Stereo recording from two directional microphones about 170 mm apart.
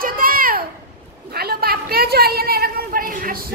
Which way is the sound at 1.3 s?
65° right (ahead or behind).